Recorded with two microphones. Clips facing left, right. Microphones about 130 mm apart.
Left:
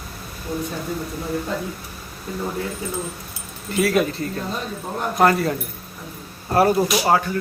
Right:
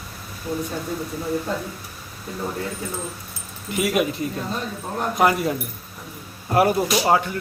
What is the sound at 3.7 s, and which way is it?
A man's voice, 15° right (ahead or behind).